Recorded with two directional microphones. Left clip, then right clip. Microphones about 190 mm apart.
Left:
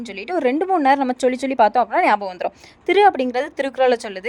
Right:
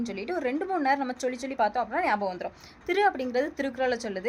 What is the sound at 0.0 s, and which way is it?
A woman's voice, 40° left (ahead or behind).